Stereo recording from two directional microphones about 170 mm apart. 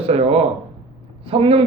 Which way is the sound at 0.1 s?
35° right (ahead or behind).